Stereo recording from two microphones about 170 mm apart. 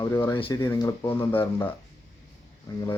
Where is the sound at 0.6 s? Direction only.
20° left (ahead or behind).